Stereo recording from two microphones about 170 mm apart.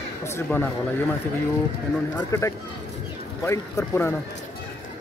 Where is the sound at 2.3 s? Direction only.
15° left (ahead or behind).